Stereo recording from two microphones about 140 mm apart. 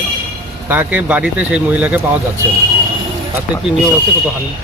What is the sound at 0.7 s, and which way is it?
Speech, 10° right (ahead or behind).